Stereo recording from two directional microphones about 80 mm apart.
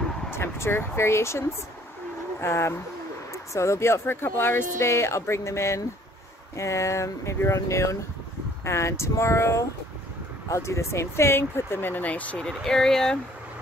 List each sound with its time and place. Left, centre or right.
0.3 s speech: left
2.4 s speech: left
12.4 s speech: centre